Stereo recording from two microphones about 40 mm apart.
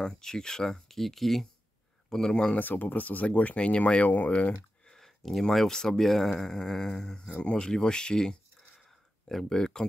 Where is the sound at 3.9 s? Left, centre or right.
Left.